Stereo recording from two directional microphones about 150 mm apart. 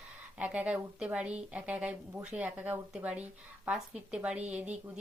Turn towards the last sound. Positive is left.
turn(degrees=-10)  # may be behind; listen again after turning